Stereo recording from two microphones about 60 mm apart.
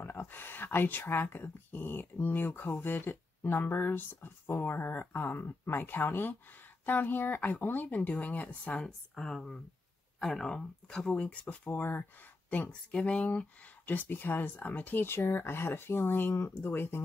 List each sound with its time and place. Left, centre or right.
0.0 s speech: left; by 11.1 s centre
11.1 s speech: left
13.8 s speech: left